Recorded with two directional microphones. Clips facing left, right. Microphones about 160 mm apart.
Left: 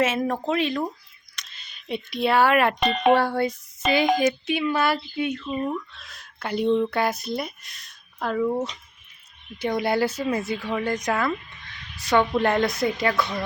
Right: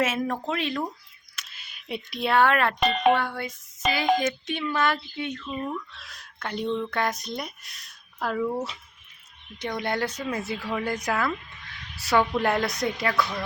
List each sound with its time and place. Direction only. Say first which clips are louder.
0.0 s speech: left 3 dB; centre (ahead or behind)
3.2 s speech: left 7 dB; 35° left (ahead or behind)
4.2 s speech: left 5 dB; 10° left (ahead or behind)
5.9 s speech: even; centre (ahead or behind); by 6.9 s 20° left (ahead or behind)
6.9 s speech: left 3 dB; 5° left (ahead or behind)
9.6 s speech: left 5 dB; 10° left (ahead or behind)
12.4 s speech: left 3 dB; 5° right (ahead or behind)